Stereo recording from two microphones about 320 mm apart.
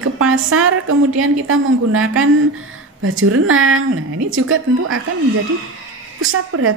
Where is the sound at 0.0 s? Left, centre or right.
Right.